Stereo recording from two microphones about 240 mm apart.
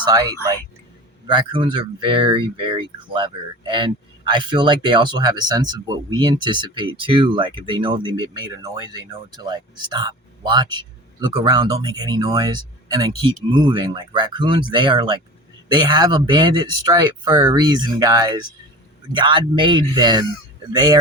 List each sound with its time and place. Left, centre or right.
0.0 s speech: centre